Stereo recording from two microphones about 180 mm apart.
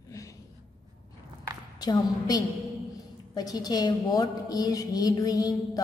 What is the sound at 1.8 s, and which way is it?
A woman's voice, 20° left (ahead or behind).